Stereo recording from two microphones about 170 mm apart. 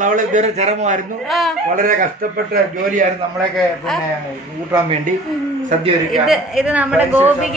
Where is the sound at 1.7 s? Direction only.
55° right (ahead or behind).